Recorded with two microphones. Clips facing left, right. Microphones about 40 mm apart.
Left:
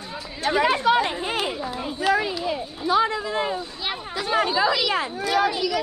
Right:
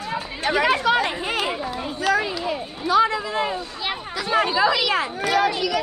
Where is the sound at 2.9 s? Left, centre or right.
Right.